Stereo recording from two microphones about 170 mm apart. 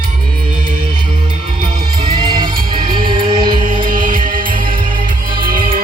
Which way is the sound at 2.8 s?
60° right (ahead or behind).